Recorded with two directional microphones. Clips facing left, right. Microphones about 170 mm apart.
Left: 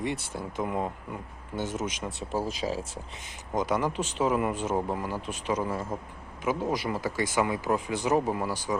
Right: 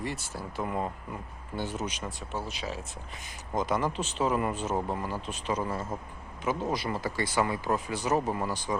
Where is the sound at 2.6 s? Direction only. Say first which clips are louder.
Left 6 dB; 35° left (ahead or behind).